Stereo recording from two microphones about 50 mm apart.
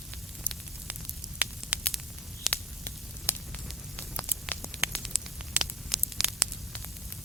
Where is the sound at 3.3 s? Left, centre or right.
Left.